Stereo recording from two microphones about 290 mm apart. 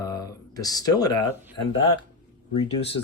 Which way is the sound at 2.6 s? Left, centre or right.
Centre.